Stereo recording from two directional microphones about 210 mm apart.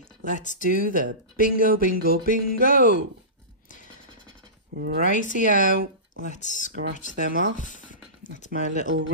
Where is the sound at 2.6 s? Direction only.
40° left (ahead or behind).